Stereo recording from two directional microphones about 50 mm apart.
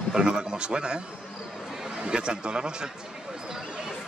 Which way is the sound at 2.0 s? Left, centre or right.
Centre.